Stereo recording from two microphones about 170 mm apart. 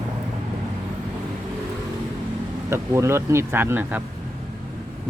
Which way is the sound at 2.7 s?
15° right (ahead or behind).